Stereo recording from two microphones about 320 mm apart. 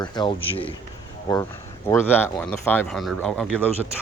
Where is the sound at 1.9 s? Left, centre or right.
Centre.